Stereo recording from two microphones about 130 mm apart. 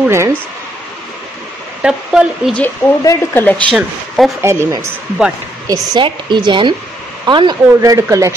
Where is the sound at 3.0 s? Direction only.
25° left (ahead or behind).